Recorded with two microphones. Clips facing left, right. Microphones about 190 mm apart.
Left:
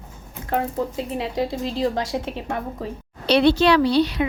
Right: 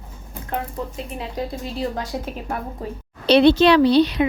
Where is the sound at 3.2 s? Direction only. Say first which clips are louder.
Right 3 dB; 20° right (ahead or behind).